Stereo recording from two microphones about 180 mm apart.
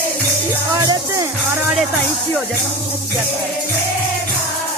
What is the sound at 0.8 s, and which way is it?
Music, 20° right (ahead or behind).